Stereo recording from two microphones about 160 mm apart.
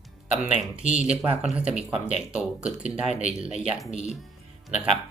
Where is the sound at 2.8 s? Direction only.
50° left (ahead or behind).